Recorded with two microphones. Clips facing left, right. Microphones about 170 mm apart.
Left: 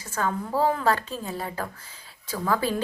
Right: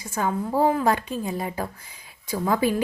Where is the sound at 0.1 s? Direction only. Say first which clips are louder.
Right 2 dB; 15° right (ahead or behind).